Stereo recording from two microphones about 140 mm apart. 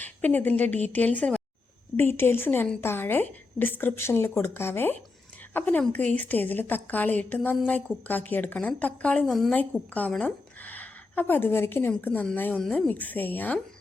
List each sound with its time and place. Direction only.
0.0 s a woman's voice: 15° left (ahead or behind)